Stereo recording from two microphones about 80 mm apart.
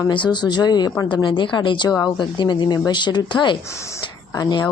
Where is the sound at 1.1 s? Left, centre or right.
Left.